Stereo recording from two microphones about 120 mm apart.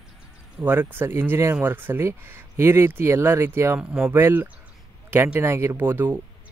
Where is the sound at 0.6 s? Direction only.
15° right (ahead or behind).